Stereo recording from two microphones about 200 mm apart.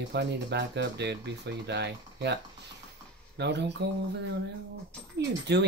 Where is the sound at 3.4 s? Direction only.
60° right (ahead or behind).